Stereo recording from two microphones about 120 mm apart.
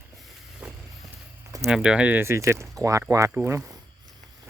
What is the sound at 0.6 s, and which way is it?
Vehicle, 10° right (ahead or behind).